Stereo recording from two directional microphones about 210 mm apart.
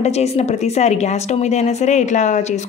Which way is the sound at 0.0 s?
30° left (ahead or behind).